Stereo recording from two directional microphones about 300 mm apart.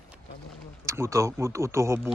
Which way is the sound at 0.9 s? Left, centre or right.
Centre.